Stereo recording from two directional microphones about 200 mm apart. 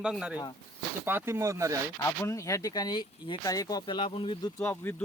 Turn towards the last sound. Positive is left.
turn(degrees=15)  # may be behind; listen again after turning